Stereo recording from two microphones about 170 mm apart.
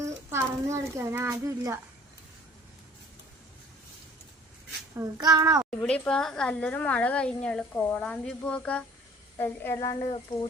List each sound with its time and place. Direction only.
0.0 s a child's voice: 15° right (ahead or behind)
4.9 s a child's voice: 20° right (ahead or behind)
5.8 s a woman's voice: 5° left (ahead or behind)